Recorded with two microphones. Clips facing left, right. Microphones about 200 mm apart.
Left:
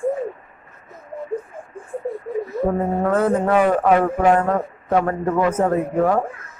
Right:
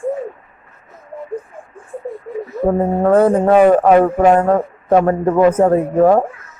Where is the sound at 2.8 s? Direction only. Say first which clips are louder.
Right 9 dB; 35° right (ahead or behind).